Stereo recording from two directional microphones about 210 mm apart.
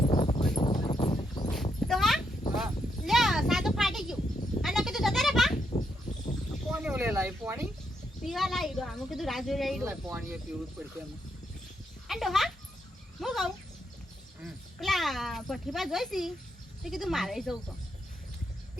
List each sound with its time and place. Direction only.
0.0 s clip-clop: 25° left (ahead or behind)
1.9 s a sound: centre (ahead or behind)
4.6 s goat: centre (ahead or behind)
6.1 s a sound: 35° left (ahead or behind)
6.7 s a sound: 5° right (ahead or behind)
8.2 s a woman's voice: centre (ahead or behind)
12.0 s speech: centre (ahead or behind)
13.1 s bird: centre (ahead or behind)
14.4 s speech: centre (ahead or behind)